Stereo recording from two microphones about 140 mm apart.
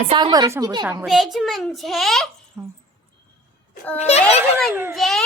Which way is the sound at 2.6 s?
20° right (ahead or behind).